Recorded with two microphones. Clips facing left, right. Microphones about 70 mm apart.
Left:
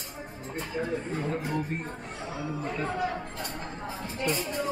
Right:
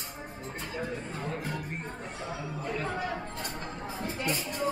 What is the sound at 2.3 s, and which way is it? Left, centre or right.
Chatter, centre.